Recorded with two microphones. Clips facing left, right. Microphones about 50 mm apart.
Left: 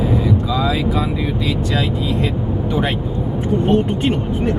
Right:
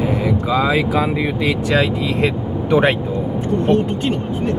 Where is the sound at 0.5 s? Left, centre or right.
Right.